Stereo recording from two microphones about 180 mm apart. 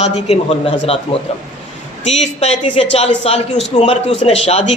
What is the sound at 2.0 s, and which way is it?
A man's voice, 40° left (ahead or behind).